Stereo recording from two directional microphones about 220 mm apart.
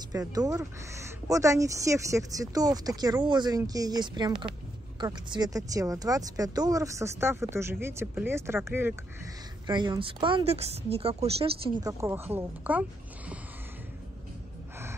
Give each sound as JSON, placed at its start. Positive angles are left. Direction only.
{"t": 0.1, "sound": "speech", "side_deg": -15}